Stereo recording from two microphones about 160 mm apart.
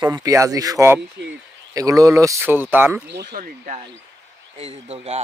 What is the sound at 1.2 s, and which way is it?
Speech, 90° right.